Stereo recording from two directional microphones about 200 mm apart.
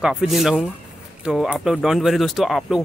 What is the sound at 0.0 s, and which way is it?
Speech, centre (ahead or behind).